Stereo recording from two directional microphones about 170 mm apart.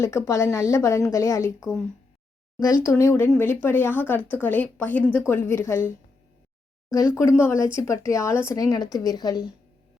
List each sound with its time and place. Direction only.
0.0 s speech: 15° left (ahead or behind)
2.8 s speech: 15° left (ahead or behind)
7.2 s a woman's voice: 15° left (ahead or behind)